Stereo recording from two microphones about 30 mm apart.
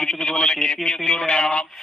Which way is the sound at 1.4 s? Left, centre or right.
Left.